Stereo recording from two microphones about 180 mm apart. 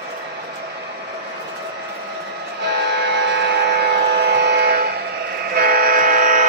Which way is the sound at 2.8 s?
70° right (ahead or behind).